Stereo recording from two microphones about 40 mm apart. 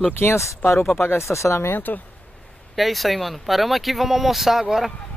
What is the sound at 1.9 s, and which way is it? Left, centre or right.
Speech, left.